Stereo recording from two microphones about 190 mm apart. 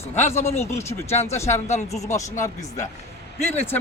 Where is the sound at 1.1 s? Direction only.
35° left (ahead or behind).